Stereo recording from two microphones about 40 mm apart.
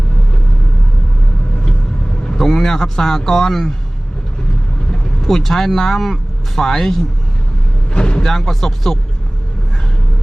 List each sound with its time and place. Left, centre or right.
2.4 s a man's voice: centre
5.2 s speech: centre
7.9 s music: left
8.2 s speech: centre